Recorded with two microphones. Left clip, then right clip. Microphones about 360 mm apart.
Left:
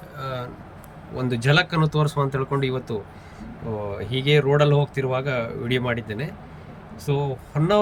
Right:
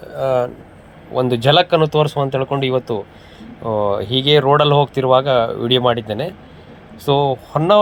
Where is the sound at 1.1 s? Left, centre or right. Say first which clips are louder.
Right 8 dB; right.